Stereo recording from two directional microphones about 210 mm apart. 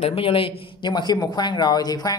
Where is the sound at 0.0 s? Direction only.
25° left (ahead or behind).